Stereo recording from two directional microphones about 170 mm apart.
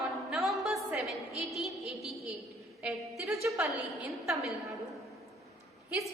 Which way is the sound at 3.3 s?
15° right (ahead or behind).